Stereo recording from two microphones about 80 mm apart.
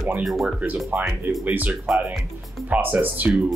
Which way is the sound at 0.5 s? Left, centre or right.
Centre.